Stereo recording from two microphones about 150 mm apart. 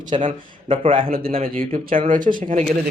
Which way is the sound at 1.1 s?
70° right (ahead or behind).